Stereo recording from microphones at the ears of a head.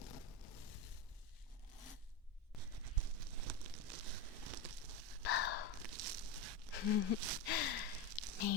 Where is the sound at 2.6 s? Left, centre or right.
Right.